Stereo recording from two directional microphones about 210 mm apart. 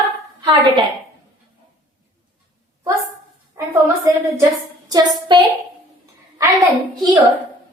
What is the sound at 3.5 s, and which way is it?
A woman's voice, 15° right (ahead or behind).